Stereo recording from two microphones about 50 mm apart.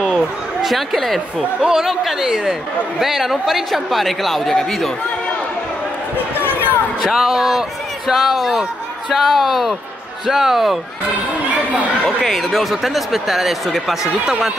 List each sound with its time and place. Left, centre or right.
0.6 s speech: centre
1.6 s speech: centre
6.1 s basketball bounce: left
7.0 s speech: centre
12.2 s speech: centre